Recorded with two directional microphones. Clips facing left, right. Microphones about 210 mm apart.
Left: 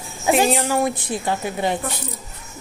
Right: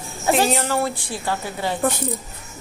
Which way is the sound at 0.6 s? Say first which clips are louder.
Left 2 dB; 15° left (ahead or behind).